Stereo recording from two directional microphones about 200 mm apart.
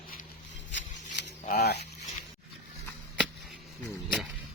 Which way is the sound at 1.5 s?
55° left (ahead or behind).